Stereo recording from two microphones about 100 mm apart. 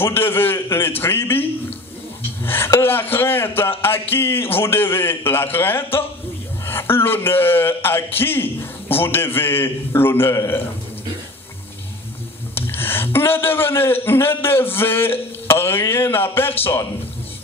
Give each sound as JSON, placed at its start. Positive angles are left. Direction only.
{"t": 0.0, "sound": "a man's voice", "side_deg": 25}
{"t": 12.5, "sound": "a man's voice", "side_deg": 20}